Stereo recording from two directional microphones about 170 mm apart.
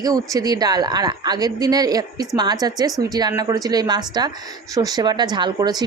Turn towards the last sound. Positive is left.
turn(degrees=-25)  # may be behind; listen again after turning